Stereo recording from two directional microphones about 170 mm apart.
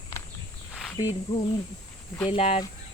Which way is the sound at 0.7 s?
10° left (ahead or behind).